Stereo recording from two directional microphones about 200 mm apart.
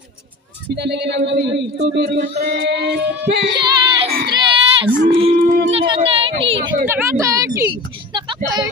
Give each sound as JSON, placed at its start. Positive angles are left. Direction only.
{"t": 0.7, "sound": "speech", "side_deg": -55}
{"t": 3.5, "sound": "child singing", "side_deg": -25}
{"t": 4.3, "sound": "baby cry", "side_deg": -25}
{"t": 5.7, "sound": "a sound", "side_deg": -30}
{"t": 6.9, "sound": "a sound", "side_deg": -15}
{"t": 8.1, "sound": "vehicle", "side_deg": -25}